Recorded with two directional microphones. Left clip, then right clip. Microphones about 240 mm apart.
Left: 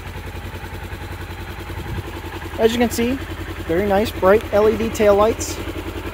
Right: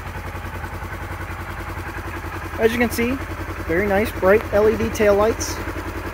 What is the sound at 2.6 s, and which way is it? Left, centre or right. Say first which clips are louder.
Speech: left 2 dB; centre.